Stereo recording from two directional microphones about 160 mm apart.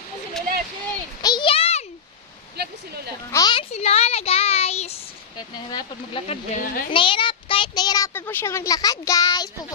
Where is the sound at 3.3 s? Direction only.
30° left (ahead or behind).